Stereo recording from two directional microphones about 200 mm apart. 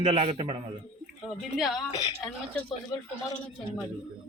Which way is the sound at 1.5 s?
Centre (ahead or behind).